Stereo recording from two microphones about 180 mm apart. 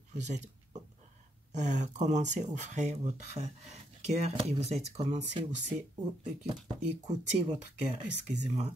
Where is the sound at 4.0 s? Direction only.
35° right (ahead or behind).